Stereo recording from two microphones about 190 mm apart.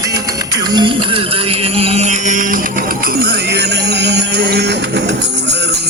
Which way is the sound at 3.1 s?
60° right (ahead or behind).